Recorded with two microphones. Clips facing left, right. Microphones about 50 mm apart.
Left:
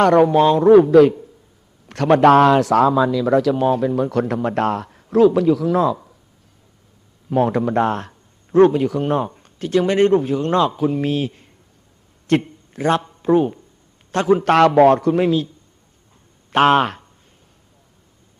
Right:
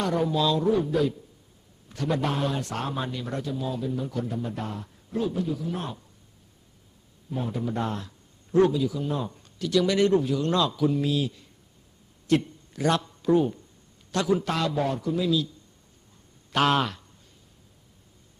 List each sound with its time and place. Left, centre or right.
0.0 s a man's voice: left
0.4 s a man's voice: left
0.7 s a man's voice: left
3.4 s a man's voice: left
7.3 s a man's voice: left
9.2 s a man's voice: left
14.4 s a man's voice: left
15.3 s a man's voice: left